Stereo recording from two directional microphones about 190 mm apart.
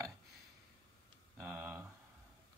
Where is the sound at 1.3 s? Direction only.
10° right (ahead or behind).